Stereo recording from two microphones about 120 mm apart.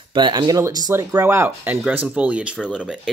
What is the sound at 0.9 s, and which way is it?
Speech, 20° right (ahead or behind).